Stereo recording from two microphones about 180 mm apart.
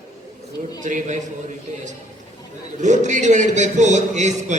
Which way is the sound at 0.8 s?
45° right (ahead or behind).